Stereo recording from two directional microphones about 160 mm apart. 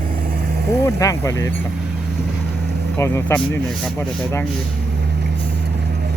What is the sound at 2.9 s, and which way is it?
Speech, 15° left (ahead or behind).